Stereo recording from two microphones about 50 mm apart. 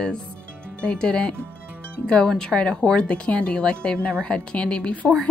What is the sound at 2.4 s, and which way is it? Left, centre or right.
Speech, centre.